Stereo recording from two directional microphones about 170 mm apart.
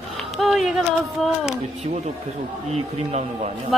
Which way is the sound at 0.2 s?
Centre (ahead or behind).